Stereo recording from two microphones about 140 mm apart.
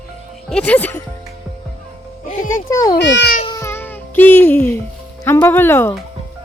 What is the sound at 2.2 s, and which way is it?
Music, 70° left (ahead or behind).